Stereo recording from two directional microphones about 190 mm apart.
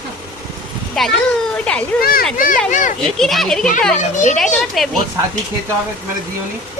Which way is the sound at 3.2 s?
Centre (ahead or behind).